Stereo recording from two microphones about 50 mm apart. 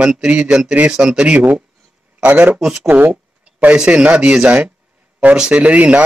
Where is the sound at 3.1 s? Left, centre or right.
Right.